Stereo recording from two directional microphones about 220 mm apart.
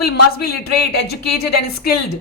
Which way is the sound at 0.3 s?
45° left (ahead or behind).